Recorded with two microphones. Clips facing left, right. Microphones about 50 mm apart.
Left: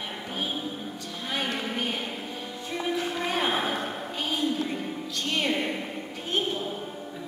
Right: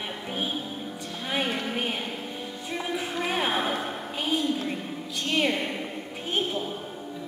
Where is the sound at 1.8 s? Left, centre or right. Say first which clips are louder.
Even; centre.